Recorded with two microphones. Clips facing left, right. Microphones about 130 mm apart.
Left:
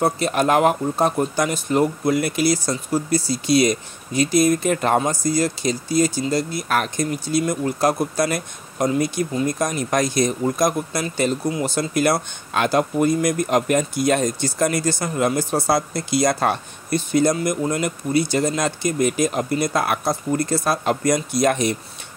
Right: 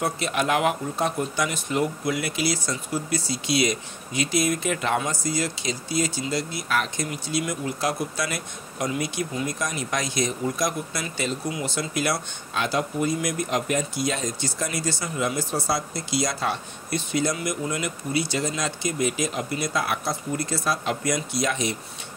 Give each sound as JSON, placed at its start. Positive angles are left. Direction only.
{"t": 0.0, "sound": "speech", "side_deg": 40}